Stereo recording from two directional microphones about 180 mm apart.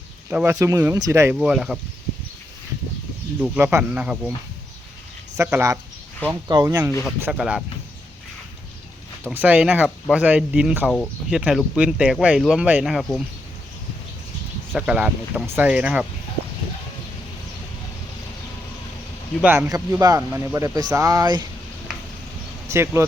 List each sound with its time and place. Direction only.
0.3 s speech: 10° right (ahead or behind)
1.4 s speech: 5° right (ahead or behind)
3.4 s speech: 10° right (ahead or behind)
5.4 s speech: 15° right (ahead or behind)
7.2 s speech: 5° right (ahead or behind)
9.3 s speech: 10° right (ahead or behind)
14.7 s speech: 5° right (ahead or behind)
19.4 s speech: 15° right (ahead or behind)
22.7 s speech: 15° right (ahead or behind)